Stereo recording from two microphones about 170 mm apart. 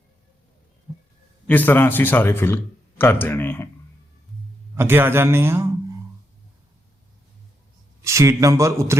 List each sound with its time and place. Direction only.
1.5 s a man's voice: 10° left (ahead or behind)
4.7 s a man's voice: 15° right (ahead or behind)
8.0 s a man's voice: 15° right (ahead or behind)